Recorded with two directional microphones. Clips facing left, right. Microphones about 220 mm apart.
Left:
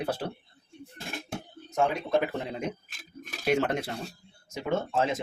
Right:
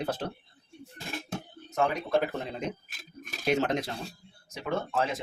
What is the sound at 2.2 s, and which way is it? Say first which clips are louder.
Speech: left 1 dB; 15° left (ahead or behind).